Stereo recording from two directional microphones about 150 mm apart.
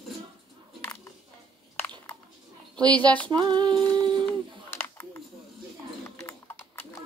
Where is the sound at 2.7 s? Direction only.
10° left (ahead or behind).